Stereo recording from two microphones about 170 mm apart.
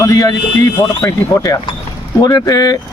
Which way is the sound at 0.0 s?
20° left (ahead or behind).